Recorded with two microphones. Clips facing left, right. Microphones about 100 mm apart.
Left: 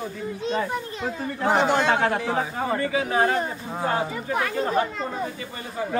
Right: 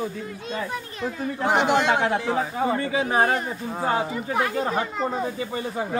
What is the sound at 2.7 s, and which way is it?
Speech, 25° right (ahead or behind).